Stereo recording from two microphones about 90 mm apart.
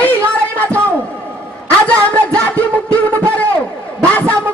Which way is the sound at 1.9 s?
15° left (ahead or behind).